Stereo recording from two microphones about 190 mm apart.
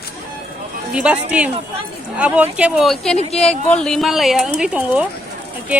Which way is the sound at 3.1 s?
35° left (ahead or behind).